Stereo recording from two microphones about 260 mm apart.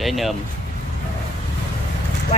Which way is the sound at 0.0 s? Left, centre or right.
Centre.